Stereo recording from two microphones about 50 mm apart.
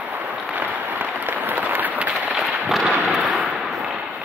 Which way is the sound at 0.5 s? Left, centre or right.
Right.